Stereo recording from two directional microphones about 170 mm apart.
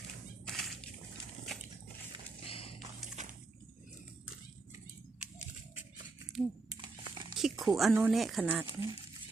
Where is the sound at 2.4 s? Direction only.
35° left (ahead or behind).